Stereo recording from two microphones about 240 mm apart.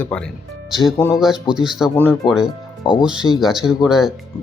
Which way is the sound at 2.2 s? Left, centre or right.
Centre.